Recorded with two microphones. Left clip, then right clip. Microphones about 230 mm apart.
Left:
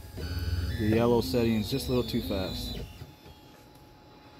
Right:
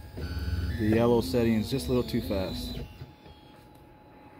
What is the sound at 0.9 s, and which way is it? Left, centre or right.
Speech, centre.